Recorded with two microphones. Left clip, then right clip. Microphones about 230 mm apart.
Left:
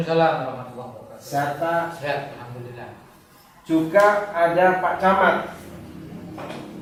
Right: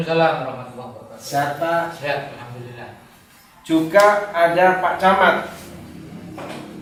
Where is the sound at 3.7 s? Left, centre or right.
Centre.